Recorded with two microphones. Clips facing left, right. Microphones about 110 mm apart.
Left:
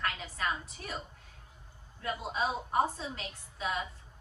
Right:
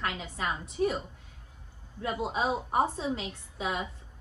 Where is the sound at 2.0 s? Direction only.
20° right (ahead or behind).